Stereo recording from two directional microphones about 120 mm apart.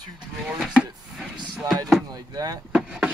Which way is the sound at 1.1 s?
5° right (ahead or behind).